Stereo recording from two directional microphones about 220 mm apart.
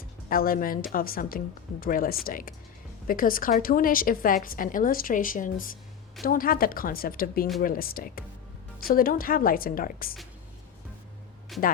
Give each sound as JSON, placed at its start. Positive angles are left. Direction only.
{"t": 0.3, "sound": "a woman's voice", "side_deg": 40}
{"t": 11.5, "sound": "speech", "side_deg": 0}